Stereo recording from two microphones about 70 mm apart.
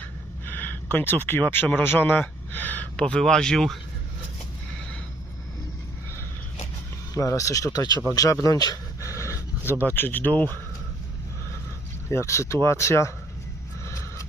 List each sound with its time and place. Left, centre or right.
0.4 s speech: left; by 3.8 s centre
7.1 s speech: left
8.1 s speech: left
8.5 s speech: left
9.0 s dog: left
9.6 s speech: right
9.9 s speech: left
12.0 s speech: left
13.8 s snort: left